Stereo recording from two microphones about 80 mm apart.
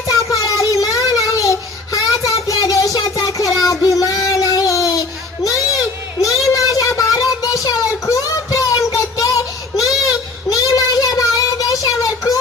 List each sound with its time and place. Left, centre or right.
0.1 s child singing: left
5.4 s children playing: left
6.2 s child singing: left